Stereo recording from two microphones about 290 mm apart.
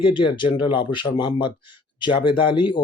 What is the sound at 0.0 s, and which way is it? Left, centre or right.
Speech, centre.